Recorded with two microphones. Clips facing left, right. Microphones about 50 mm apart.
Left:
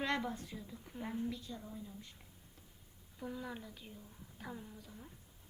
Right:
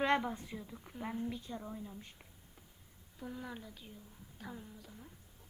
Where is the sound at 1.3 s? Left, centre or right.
Right.